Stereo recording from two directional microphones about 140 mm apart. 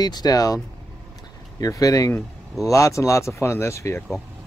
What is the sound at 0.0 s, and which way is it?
Speech, 30° left (ahead or behind).